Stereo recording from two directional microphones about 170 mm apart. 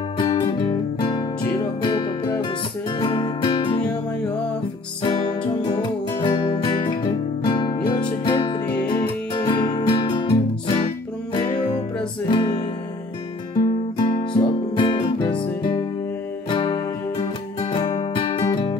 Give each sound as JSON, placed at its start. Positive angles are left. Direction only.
{"t": 0.2, "sound": "music", "side_deg": 30}
{"t": 5.0, "sound": "music", "side_deg": 25}
{"t": 12.3, "sound": "music", "side_deg": 25}
{"t": 13.9, "sound": "music", "side_deg": 30}